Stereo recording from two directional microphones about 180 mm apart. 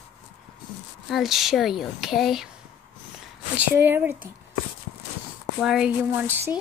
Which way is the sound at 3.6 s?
10° right (ahead or behind).